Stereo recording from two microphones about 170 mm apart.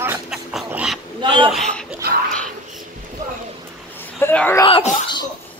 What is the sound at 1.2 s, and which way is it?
Speech, 30° right (ahead or behind).